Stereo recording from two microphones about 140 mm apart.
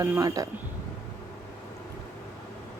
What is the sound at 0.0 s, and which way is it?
Speech, 20° right (ahead or behind).